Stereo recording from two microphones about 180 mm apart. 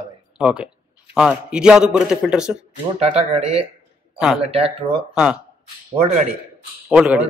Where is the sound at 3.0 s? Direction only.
35° right (ahead or behind).